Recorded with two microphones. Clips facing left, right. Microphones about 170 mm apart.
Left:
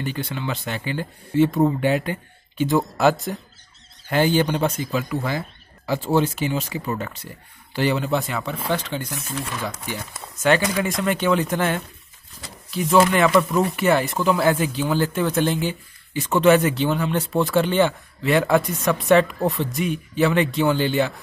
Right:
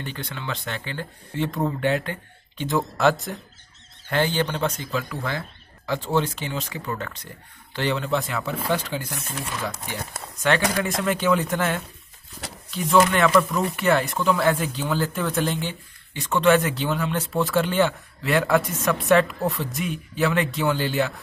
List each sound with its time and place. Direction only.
0.0 s speech: 10° left (ahead or behind)
10.8 s speech: centre (ahead or behind)